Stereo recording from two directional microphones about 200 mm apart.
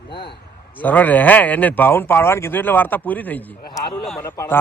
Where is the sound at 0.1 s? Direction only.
25° left (ahead or behind).